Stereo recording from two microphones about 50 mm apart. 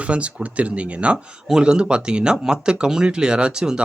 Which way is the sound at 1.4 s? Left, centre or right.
Centre.